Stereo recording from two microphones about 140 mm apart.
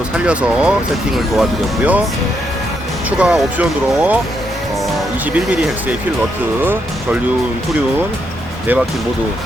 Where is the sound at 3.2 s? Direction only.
10° right (ahead or behind).